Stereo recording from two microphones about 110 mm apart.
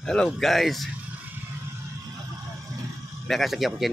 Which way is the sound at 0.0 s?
5° left (ahead or behind).